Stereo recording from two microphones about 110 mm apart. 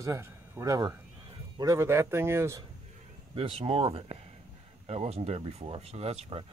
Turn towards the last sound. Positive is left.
turn(degrees=-65)  # may be behind; listen again after turning